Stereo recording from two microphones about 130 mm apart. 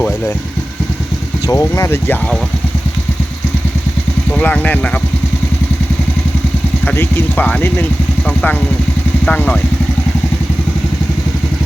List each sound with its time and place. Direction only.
1.5 s speech: 25° left (ahead or behind)
4.4 s speech: 10° left (ahead or behind)
6.8 s speech: 15° left (ahead or behind)